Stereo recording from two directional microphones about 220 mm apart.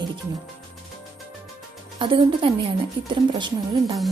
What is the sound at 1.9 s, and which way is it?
A woman's voice, 20° right (ahead or behind).